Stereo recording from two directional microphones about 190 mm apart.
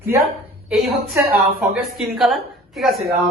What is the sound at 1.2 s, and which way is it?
A woman's voice, 10° right (ahead or behind).